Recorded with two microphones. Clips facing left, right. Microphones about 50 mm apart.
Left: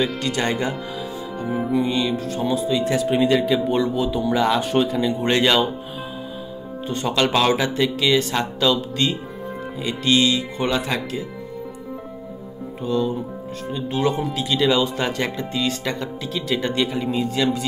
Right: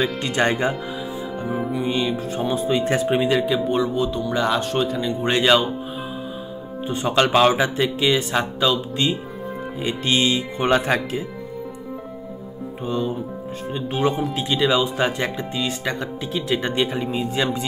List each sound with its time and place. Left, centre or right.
0.2 s speech: right
1.4 s speech: centre
1.8 s music: centre
2.5 s speech: right
3.2 s speech: centre
6.9 s music: centre
9.8 s speech: right
12.8 s speech: right
13.7 s music: centre
14.3 s speech: centre